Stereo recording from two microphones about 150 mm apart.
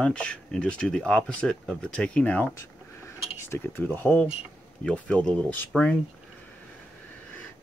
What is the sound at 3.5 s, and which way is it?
Speech, 15° left (ahead or behind).